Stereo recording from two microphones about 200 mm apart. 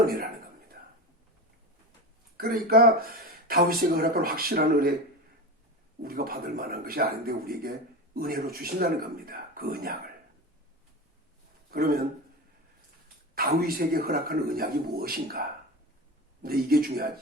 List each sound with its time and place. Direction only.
0.0 s a man's voice: 45° right (ahead or behind)
2.4 s speech: 45° right (ahead or behind)
6.0 s speech: 50° right (ahead or behind)
11.7 s speech: 50° right (ahead or behind)
13.3 s speech: 45° right (ahead or behind)